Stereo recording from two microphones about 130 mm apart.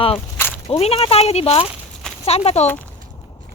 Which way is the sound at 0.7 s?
50° left (ahead or behind).